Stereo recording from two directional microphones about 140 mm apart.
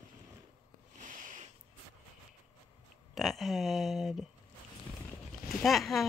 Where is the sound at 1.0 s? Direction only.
70° right (ahead or behind).